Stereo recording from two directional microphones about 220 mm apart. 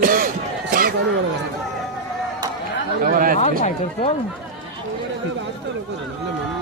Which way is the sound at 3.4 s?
30° left (ahead or behind).